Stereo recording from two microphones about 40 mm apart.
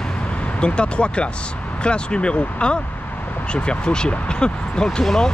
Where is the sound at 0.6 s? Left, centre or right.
Left.